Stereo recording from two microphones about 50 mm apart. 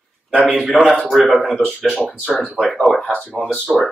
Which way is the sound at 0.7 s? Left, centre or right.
Centre.